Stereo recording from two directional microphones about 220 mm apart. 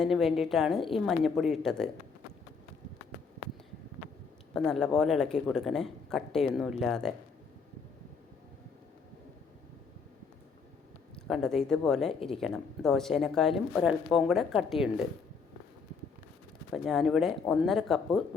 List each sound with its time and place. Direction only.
0.0 s speech: centre (ahead or behind)
4.5 s speech: 5° left (ahead or behind)
11.1 s speech: centre (ahead or behind)
16.7 s speech: centre (ahead or behind)